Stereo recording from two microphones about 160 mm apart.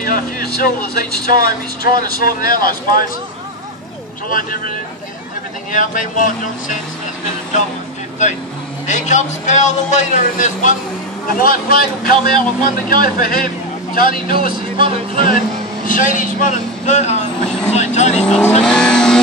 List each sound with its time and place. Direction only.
0.0 s speech: 65° left (ahead or behind)
4.3 s speech: 60° left (ahead or behind)
5.7 s speech: 55° left (ahead or behind)
8.8 s a man's voice: 45° left (ahead or behind)
11.3 s a man's voice: 65° left (ahead or behind); by 18.2 s 45° left (ahead or behind)
18.6 s vehicle: 5° left (ahead or behind)